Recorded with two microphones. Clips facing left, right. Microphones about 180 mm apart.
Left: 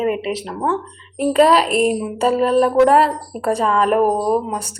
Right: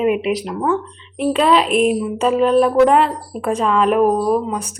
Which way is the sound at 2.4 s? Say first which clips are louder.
Right 1 dB; centre (ahead or behind).